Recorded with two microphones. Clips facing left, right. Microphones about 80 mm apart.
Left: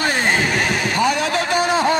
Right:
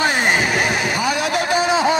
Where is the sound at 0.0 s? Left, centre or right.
Centre.